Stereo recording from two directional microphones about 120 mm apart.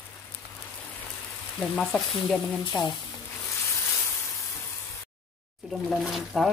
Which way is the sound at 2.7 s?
40° left (ahead or behind).